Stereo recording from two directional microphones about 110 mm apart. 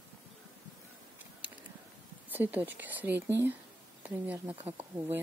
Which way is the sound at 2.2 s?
15° right (ahead or behind).